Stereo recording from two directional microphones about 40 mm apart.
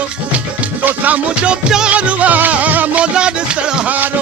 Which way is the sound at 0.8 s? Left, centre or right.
Right.